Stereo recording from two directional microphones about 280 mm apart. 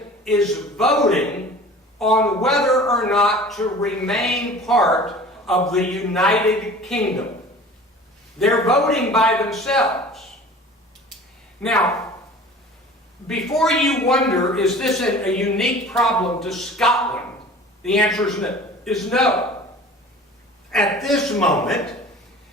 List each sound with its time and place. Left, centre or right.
0.3 s a man's voice: centre
8.4 s a man's voice: centre
13.2 s a man's voice: centre
20.7 s a man's voice: centre